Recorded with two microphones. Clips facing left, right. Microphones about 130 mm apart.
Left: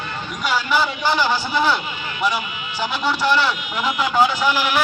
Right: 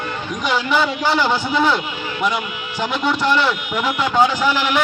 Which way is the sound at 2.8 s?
5° left (ahead or behind).